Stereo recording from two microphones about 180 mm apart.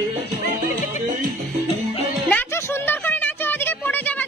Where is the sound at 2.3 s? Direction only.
10° left (ahead or behind).